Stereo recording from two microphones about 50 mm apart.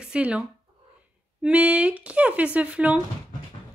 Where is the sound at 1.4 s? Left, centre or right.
Right.